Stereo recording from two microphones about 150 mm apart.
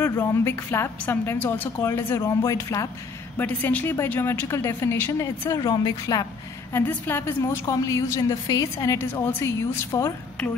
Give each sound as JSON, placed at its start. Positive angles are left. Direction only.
{"t": 0.0, "sound": "a woman's voice", "side_deg": 20}
{"t": 3.3, "sound": "a woman's voice", "side_deg": 10}
{"t": 6.7, "sound": "a woman's voice", "side_deg": 15}